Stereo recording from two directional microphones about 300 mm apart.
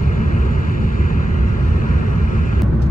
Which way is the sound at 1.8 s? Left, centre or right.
Left.